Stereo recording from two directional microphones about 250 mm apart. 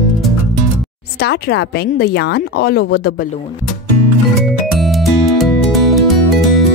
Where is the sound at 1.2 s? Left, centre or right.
Left.